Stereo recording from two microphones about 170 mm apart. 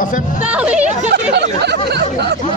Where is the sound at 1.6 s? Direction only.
75° right (ahead or behind).